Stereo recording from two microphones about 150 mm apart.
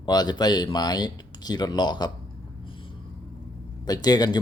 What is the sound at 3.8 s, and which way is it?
Speech, 25° left (ahead or behind).